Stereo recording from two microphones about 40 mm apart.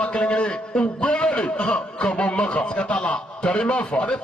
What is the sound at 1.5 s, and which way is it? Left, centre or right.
Speech, centre.